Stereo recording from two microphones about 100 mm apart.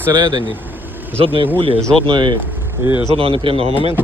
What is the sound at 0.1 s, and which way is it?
Speech, 50° right (ahead or behind).